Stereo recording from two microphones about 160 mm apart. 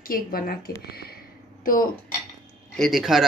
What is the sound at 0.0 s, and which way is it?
Speech, 65° left (ahead or behind).